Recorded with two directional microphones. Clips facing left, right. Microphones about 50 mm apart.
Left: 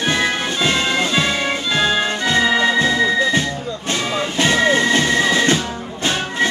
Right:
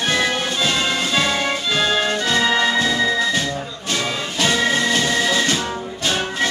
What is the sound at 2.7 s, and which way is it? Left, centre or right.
Music, left.